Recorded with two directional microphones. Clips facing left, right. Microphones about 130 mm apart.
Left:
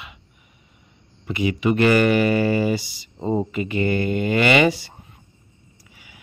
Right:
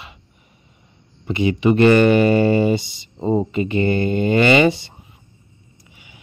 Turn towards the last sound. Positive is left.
turn(degrees=-25)  # may be behind; listen again after turning